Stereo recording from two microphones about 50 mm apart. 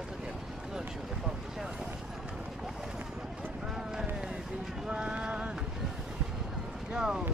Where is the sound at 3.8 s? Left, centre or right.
Centre.